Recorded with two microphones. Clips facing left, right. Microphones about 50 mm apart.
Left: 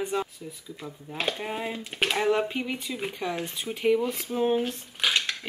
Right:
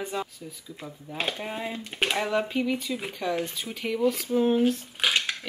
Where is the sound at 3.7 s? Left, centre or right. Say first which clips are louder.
Left 9 dB; left.